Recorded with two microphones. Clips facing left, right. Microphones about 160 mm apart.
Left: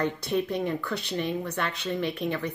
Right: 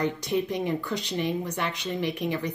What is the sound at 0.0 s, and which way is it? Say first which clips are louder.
Speech: even; 15° right (ahead or behind).